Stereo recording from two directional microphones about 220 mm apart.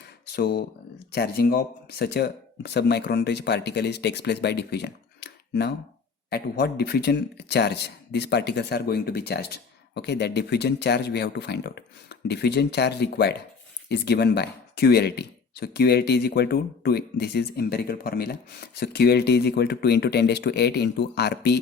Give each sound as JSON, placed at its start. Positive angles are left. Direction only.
{"t": 0.3, "sound": "speech", "side_deg": 45}